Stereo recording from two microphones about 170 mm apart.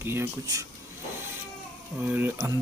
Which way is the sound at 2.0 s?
10° right (ahead or behind).